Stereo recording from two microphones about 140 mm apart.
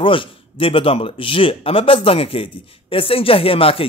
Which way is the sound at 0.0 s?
40° left (ahead or behind).